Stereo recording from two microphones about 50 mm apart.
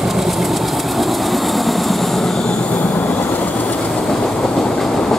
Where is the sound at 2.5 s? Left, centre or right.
Centre.